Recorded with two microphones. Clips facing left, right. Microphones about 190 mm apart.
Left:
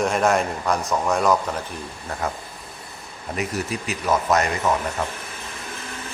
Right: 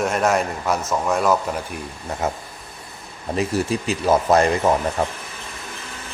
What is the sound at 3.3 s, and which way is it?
Speech, 30° right (ahead or behind).